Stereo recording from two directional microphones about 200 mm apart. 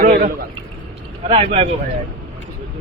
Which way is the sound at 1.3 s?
30° right (ahead or behind).